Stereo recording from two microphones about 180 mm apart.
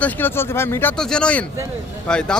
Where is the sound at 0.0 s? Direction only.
10° left (ahead or behind).